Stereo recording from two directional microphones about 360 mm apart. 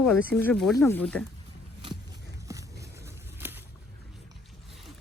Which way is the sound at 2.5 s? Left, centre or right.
Centre.